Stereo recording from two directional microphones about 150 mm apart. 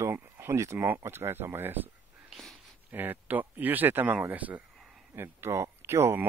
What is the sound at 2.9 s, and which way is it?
Speech, 15° right (ahead or behind).